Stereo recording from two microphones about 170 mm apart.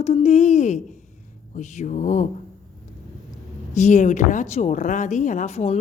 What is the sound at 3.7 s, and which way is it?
Speech, 45° left (ahead or behind).